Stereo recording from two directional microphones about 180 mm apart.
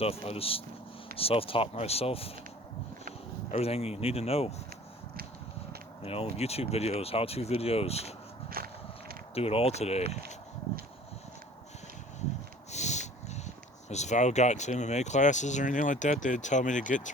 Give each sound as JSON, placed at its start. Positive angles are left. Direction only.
{"t": 0.0, "sound": "speech", "side_deg": 35}
{"t": 3.5, "sound": "speech", "side_deg": 35}
{"t": 6.0, "sound": "speech", "side_deg": 35}
{"t": 8.4, "sound": "walk", "side_deg": -55}
{"t": 9.3, "sound": "speech", "side_deg": 35}
{"t": 12.7, "sound": "dog", "side_deg": 40}
{"t": 13.9, "sound": "speech", "side_deg": 40}